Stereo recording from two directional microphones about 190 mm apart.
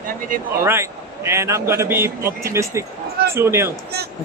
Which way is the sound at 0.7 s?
15° right (ahead or behind).